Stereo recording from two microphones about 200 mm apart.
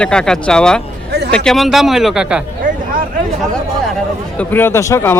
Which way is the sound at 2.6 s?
40° right (ahead or behind).